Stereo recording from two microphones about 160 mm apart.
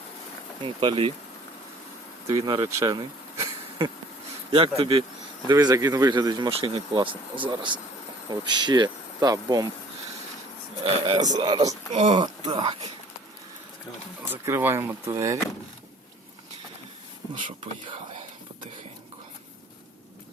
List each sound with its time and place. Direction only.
0.6 s speech: 30° right (ahead or behind)
2.2 s speech: 25° right (ahead or behind)
4.8 s speech: 40° right (ahead or behind)
5.5 s speech: 25° right (ahead or behind)
10.8 s speech: 30° right (ahead or behind)
11.9 s speech: 45° right (ahead or behind)
12.5 s speech: 30° right (ahead or behind)
14.3 s speech: 15° right (ahead or behind)